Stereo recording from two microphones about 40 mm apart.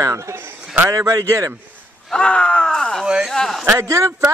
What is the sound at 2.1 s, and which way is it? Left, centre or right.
Groan, left.